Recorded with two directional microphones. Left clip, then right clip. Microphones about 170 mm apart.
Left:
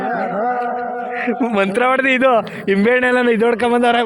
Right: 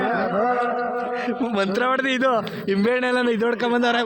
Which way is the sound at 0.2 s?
15° left (ahead or behind).